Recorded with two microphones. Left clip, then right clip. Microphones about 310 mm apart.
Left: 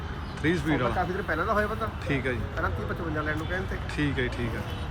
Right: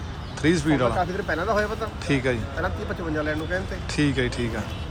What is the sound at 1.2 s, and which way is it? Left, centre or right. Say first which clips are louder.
Speech: right 1 dB; right.